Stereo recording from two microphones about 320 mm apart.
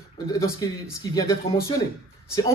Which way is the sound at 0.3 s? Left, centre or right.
Centre.